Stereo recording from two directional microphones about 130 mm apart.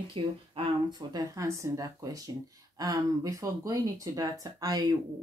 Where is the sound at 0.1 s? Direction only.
40° right (ahead or behind).